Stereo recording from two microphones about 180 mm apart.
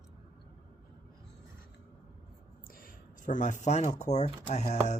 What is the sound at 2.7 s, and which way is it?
Speech, 55° left (ahead or behind).